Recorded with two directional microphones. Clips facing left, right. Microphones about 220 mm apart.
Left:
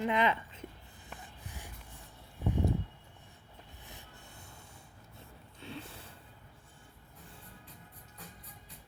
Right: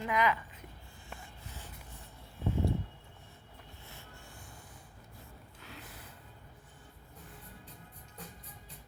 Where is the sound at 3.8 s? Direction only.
20° left (ahead or behind).